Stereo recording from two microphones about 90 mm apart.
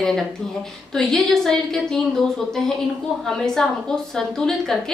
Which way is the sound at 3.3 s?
5° left (ahead or behind).